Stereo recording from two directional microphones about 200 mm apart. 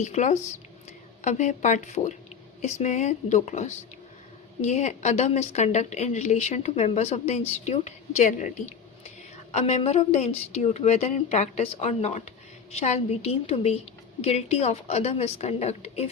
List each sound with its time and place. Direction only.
0.0 s a woman's voice: 35° left (ahead or behind)